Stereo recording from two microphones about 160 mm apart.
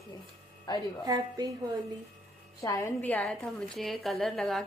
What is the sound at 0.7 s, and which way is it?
Speech, 25° left (ahead or behind).